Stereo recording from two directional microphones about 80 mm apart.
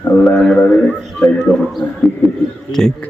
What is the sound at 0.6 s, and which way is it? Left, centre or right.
Speech, centre.